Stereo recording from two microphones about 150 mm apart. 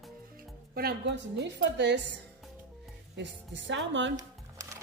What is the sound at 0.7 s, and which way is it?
Speech, 90° right.